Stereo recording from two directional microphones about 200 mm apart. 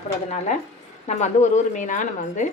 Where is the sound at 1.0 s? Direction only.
35° left (ahead or behind).